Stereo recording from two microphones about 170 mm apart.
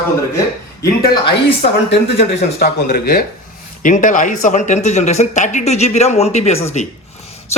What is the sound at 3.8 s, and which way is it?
Speech, 50° left (ahead or behind).